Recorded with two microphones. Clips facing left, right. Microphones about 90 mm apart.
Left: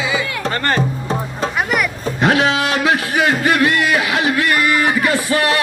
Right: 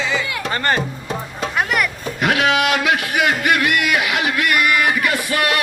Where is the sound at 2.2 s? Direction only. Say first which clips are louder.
Left 2 dB; 30° left (ahead or behind).